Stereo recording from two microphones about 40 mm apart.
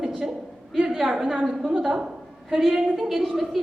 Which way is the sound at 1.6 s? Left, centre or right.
Right.